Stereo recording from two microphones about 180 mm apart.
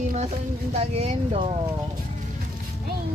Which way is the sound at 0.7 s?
35° right (ahead or behind).